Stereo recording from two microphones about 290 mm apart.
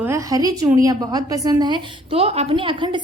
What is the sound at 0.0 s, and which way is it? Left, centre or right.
A woman's voice, centre.